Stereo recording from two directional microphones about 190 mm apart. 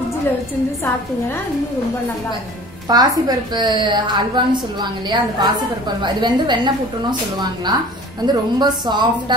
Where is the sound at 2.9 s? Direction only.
20° right (ahead or behind).